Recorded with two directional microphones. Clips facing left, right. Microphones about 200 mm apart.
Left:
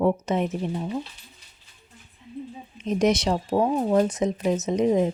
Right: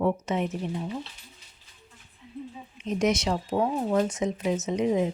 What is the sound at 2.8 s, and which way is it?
Speech, 35° left (ahead or behind).